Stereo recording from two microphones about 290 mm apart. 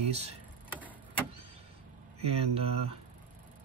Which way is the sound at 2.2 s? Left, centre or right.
Right.